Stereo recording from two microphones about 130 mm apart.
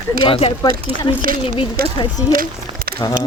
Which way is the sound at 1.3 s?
90° right.